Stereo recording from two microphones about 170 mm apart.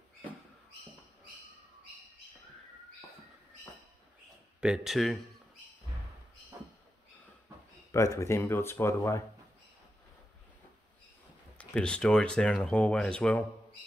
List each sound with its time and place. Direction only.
4.6 s speech: 5° right (ahead or behind)
7.9 s speech: 15° left (ahead or behind)
11.5 s speech: 5° left (ahead or behind)